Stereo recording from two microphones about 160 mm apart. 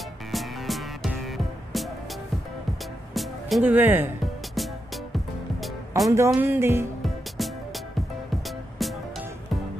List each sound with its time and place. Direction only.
0.3 s music: centre (ahead or behind)
3.2 s music: centre (ahead or behind)
3.6 s music: 10° right (ahead or behind)
5.1 s music: centre (ahead or behind)
6.0 s music: 15° right (ahead or behind)
7.0 s music: centre (ahead or behind)